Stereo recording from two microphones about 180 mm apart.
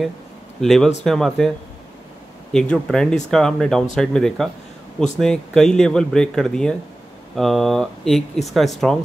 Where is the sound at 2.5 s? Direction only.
5° left (ahead or behind).